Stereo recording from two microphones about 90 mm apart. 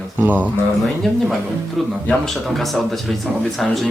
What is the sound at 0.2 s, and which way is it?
Speech, 15° right (ahead or behind).